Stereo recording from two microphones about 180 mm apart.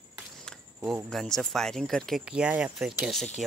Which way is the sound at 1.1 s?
Centre (ahead or behind).